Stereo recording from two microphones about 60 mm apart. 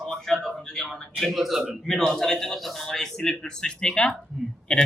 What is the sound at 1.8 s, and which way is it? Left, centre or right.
A man's voice, centre.